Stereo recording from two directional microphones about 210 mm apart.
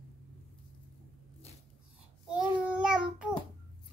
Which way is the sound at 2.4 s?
5° right (ahead or behind).